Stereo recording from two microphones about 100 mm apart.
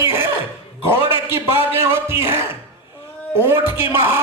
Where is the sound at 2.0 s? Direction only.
20° right (ahead or behind).